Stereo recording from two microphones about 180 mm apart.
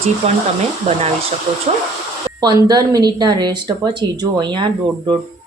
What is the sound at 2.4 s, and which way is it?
A woman's voice, 20° right (ahead or behind).